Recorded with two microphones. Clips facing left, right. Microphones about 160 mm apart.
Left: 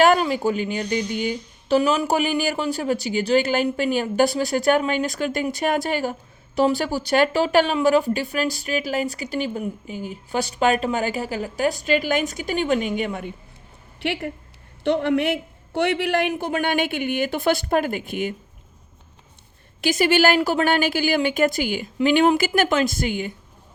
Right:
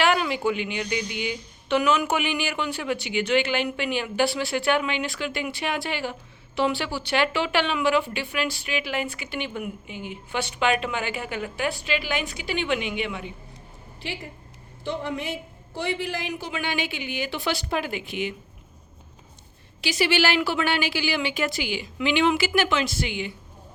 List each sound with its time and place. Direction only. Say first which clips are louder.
0.0 s speech: left 5 dB; 40° left (ahead or behind)
14.0 s a man's voice: left 9 dB; 65° left (ahead or behind); by 18.3 s 50° left (ahead or behind)
19.8 s a man's voice: left 5 dB; 50° left (ahead or behind)